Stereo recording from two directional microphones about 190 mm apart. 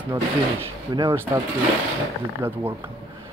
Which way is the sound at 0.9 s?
25° right (ahead or behind).